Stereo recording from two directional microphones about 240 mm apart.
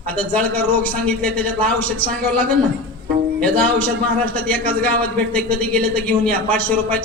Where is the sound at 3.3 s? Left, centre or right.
Centre.